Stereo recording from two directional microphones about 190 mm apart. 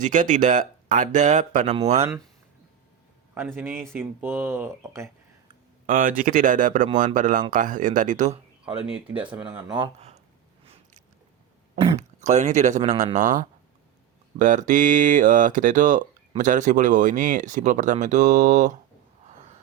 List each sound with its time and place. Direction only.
0.0 s speech: 40° right (ahead or behind)
3.3 s speech: 10° right (ahead or behind)
5.8 s speech: 45° right (ahead or behind)
8.9 s speech: 5° right (ahead or behind)
9.7 s speech: 30° right (ahead or behind)
11.8 s speech: 40° right (ahead or behind)